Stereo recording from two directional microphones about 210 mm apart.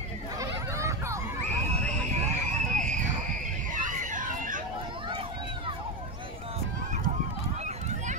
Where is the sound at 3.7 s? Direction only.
40° right (ahead or behind).